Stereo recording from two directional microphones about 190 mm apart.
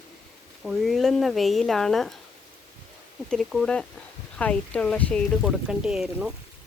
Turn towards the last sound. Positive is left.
turn(degrees=-5)  # may be behind; listen again after turning